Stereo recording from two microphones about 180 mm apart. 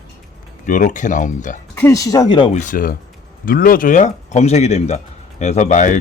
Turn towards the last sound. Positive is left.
turn(degrees=45)  # may be behind; listen again after turning